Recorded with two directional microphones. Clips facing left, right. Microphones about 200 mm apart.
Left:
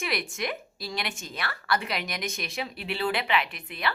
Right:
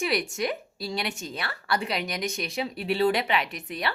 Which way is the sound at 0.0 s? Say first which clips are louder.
Right 4 dB; 35° right (ahead or behind).